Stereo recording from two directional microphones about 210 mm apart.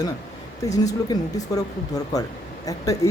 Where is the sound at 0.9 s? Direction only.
15° left (ahead or behind).